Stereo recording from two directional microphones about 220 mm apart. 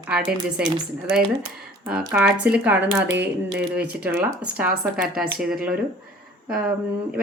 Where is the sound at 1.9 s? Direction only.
5° right (ahead or behind).